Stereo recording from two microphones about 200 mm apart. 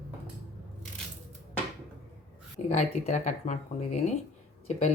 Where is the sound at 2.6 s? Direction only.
35° left (ahead or behind).